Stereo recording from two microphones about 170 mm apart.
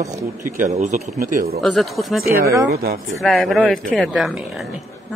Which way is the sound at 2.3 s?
15° right (ahead or behind).